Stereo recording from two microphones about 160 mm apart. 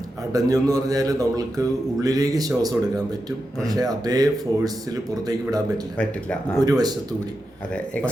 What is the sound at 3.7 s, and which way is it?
A man's voice, 25° right (ahead or behind).